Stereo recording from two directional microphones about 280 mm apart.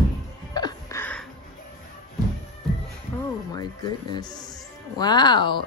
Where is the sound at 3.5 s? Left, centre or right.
Centre.